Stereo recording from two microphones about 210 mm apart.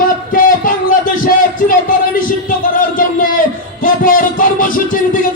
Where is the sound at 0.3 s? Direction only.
40° left (ahead or behind).